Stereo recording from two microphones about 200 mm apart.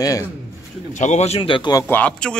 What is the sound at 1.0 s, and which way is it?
Speech, 35° left (ahead or behind).